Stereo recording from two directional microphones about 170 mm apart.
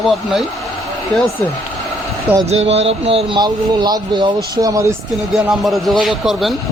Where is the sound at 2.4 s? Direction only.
40° right (ahead or behind); by 4.9 s 20° right (ahead or behind).